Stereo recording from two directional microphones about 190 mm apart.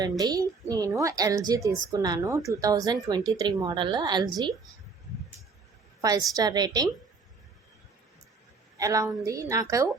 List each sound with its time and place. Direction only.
0.0 s a woman's voice: 20° right (ahead or behind)
6.0 s a woman's voice: 20° right (ahead or behind)
8.8 s a woman's voice: 15° right (ahead or behind)